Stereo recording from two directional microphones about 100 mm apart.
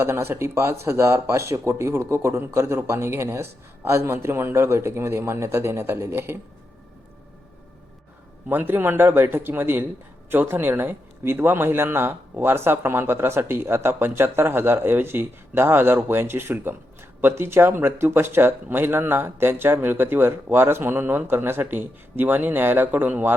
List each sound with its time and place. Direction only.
0.0 s speech: 25° right (ahead or behind)
8.4 s speech: 20° right (ahead or behind)